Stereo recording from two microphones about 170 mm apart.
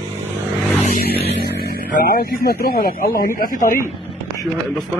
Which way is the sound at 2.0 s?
60° left (ahead or behind).